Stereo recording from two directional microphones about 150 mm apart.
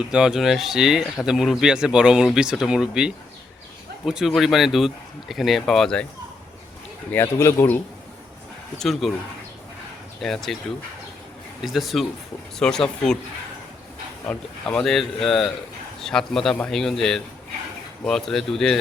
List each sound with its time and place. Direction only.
0.1 s speech: 5° right (ahead or behind)
7.1 s speech: 15° left (ahead or behind)
8.8 s speech: centre (ahead or behind)
10.2 s speech: centre (ahead or behind)
11.6 s speech: centre (ahead or behind)
14.3 s speech: 5° left (ahead or behind)